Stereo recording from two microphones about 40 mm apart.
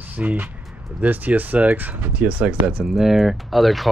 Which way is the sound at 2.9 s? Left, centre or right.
Centre.